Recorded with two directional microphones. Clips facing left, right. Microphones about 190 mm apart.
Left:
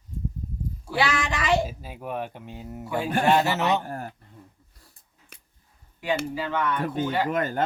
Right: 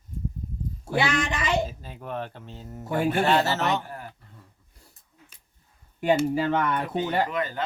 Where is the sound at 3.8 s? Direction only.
45° left (ahead or behind).